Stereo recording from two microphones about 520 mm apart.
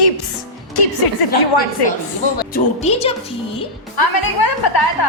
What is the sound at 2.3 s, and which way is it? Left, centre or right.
Speech, centre.